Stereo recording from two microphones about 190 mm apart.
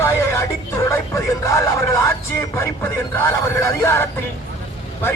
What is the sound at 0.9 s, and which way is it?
Speech, 15° left (ahead or behind).